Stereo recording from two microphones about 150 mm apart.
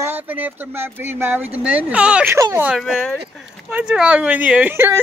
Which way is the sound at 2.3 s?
20° right (ahead or behind).